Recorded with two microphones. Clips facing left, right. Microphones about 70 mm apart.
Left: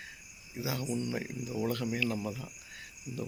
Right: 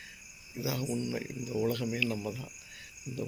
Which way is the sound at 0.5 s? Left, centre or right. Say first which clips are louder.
Right 1 dB; left.